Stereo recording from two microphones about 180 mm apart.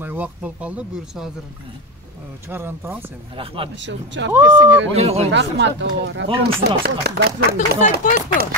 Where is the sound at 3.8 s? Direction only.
85° right.